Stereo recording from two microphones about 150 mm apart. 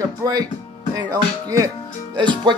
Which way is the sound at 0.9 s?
25° right (ahead or behind).